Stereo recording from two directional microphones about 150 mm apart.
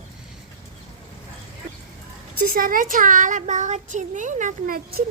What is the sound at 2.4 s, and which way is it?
A child's voice, 70° right (ahead or behind).